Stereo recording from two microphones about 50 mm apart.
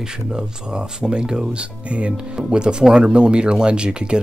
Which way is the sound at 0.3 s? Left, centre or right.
Centre.